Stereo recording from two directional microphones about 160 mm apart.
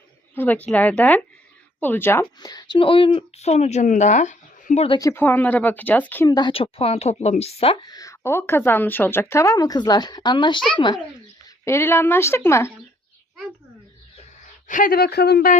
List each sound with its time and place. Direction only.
0.3 s speech: 10° left (ahead or behind)
2.4 s speech: 25° left (ahead or behind); by 4.9 s 45° left (ahead or behind)
4.9 s speech: 15° left (ahead or behind)
6.2 s a woman's voice: 25° left (ahead or behind)
7.8 s speech: 25° left (ahead or behind)
11.6 s speech: 15° left (ahead or behind)
14.7 s speech: 60° left (ahead or behind)